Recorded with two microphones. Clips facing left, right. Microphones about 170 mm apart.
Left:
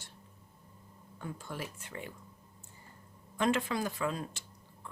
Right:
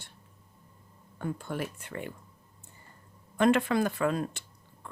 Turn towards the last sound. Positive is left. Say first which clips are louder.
# right 2 dB
turn(degrees=-60)  # may be behind; listen again after turning